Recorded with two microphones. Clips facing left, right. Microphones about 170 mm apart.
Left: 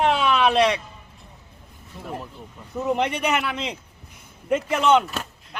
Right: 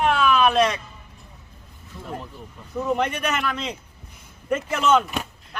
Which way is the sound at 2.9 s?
15° left (ahead or behind).